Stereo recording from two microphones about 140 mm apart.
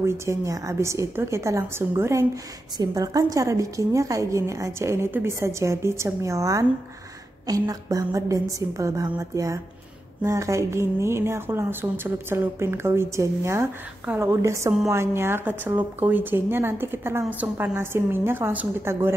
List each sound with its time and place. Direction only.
0.0 s speech: 20° right (ahead or behind)